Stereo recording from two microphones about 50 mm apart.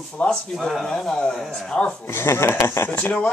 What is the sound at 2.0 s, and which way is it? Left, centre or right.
Speech, left.